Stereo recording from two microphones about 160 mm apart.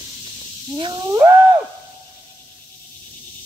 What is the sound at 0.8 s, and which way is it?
Whale vocalization, 30° right (ahead or behind).